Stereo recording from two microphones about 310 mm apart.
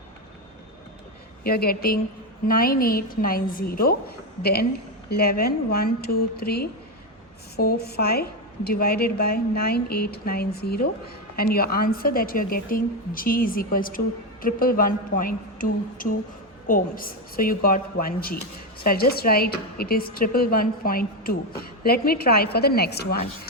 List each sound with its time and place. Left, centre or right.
1.5 s a woman's voice: left
5.0 s a woman's voice: left